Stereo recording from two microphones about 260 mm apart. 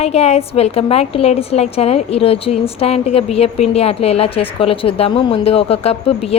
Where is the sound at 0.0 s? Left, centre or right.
Left.